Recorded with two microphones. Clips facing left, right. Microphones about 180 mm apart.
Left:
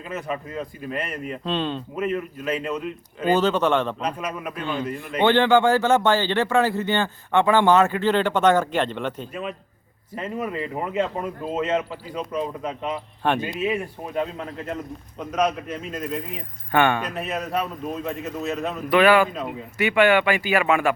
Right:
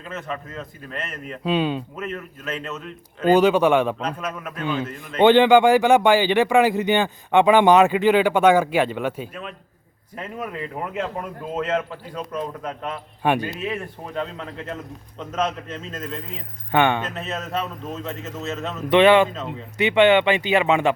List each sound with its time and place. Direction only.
0.1 s a man's voice: 10° left (ahead or behind)
1.5 s speech: 10° right (ahead or behind)
2.0 s a man's voice: 5° left (ahead or behind)
3.3 s speech: 10° right (ahead or behind)
4.0 s a man's voice: 10° left (ahead or behind)
5.2 s speech: 15° right (ahead or behind)
9.3 s speech: 5° left (ahead or behind)
13.2 s speech: 10° right (ahead or behind)
13.6 s a man's voice: 10° left (ahead or behind)
16.7 s speech: 20° right (ahead or behind)
17.1 s a man's voice: 15° left (ahead or behind)
18.9 s speech: 25° right (ahead or behind)
19.3 s a man's voice: 15° left (ahead or behind)
19.8 s speech: 20° right (ahead or behind)